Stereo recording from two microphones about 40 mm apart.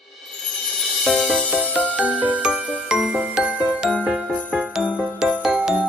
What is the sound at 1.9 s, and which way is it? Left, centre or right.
Jingle, right.